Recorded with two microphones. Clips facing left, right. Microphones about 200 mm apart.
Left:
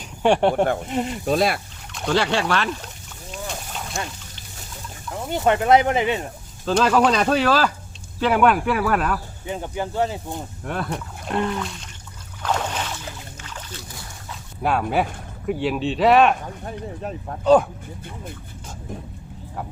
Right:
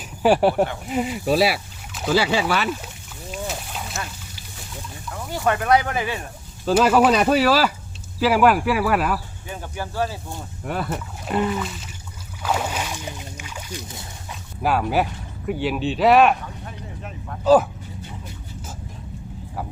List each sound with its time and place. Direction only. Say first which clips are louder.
0.2 s speech: right 1 dB; 5° right (ahead or behind)
3.3 s a sound: right 2 dB; 5° right (ahead or behind)
5.1 s speech: left 3 dB; 25° left (ahead or behind)
6.7 s speech: right 2 dB; 5° right (ahead or behind)
9.5 s speech: left 5 dB; 20° left (ahead or behind)
10.6 s speech: right 3 dB; 5° right (ahead or behind)
12.4 s boat: even; 10° right (ahead or behind)
14.6 s speech: right 1 dB; centre (ahead or behind)
16.6 s speech: left 6 dB; 35° left (ahead or behind)
17.4 s speech: even; 5° right (ahead or behind)